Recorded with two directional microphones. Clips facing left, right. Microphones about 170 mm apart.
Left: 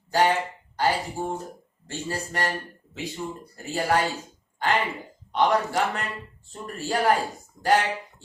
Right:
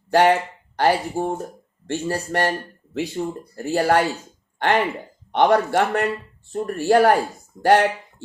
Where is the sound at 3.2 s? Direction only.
55° right (ahead or behind).